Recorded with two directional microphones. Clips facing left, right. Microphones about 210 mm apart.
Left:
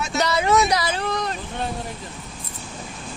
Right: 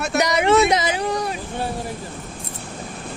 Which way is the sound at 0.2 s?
20° right (ahead or behind).